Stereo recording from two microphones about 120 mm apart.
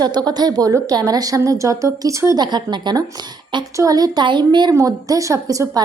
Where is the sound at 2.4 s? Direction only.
40° right (ahead or behind).